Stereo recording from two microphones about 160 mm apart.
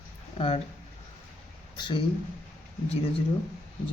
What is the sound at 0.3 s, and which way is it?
Speech, 35° left (ahead or behind).